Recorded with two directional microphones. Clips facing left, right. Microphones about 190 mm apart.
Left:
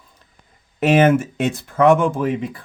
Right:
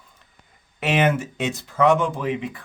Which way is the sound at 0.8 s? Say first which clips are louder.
Left 6 dB; 45° left (ahead or behind).